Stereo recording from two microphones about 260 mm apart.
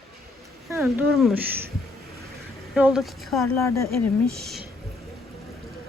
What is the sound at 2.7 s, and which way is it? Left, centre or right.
Speech, centre.